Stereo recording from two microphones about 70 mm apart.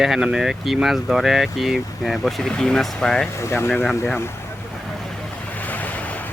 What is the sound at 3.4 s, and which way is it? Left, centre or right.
Speech, left.